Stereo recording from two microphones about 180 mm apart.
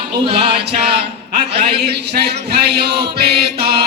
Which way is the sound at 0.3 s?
30° right (ahead or behind).